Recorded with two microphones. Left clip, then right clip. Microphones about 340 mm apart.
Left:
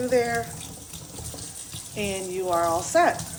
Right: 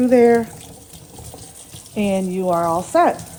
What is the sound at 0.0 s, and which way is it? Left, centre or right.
Speech, centre.